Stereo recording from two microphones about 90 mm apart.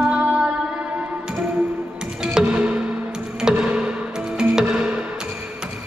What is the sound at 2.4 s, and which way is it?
Music, 15° right (ahead or behind).